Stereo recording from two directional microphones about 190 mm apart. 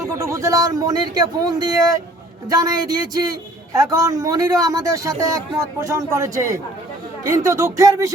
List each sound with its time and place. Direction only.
0.0 s a man's voice: 15° right (ahead or behind)